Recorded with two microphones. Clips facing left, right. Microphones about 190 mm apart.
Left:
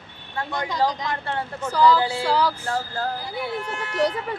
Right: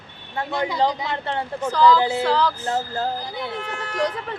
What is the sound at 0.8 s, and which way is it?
Speech, 10° right (ahead or behind).